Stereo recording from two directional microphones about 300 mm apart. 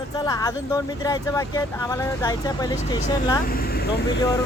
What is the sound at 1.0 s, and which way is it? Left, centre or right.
Speech, centre.